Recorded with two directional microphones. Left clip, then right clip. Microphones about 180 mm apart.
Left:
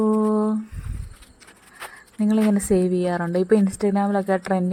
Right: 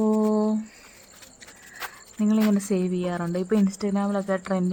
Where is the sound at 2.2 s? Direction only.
20° left (ahead or behind).